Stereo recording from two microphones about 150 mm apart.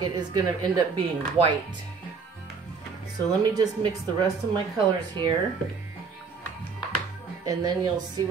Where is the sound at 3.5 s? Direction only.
25° right (ahead or behind).